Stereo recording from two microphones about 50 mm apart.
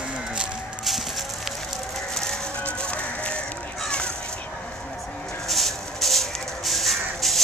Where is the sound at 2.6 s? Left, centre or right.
Left.